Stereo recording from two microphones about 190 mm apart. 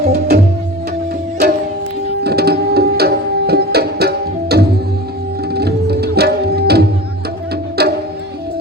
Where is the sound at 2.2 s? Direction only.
55° right (ahead or behind).